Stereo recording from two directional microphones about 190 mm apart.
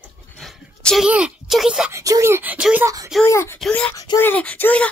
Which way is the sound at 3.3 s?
15° left (ahead or behind).